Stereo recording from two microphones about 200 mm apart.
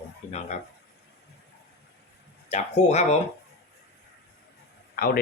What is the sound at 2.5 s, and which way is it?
Speech, 35° left (ahead or behind).